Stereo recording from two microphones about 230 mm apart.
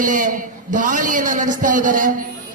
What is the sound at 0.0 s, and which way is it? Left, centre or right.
A man's voice, right.